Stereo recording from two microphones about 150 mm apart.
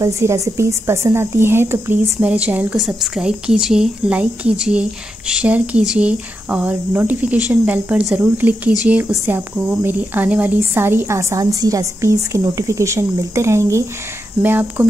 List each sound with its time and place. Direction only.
0.0 s a woman's voice: 20° right (ahead or behind)